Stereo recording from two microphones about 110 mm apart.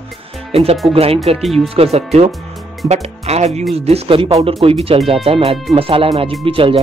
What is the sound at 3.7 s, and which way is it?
Speech, 65° right (ahead or behind).